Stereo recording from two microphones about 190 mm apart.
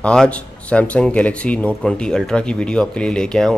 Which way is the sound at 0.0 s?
5° left (ahead or behind).